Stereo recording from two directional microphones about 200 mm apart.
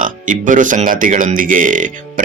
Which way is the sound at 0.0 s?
40° right (ahead or behind).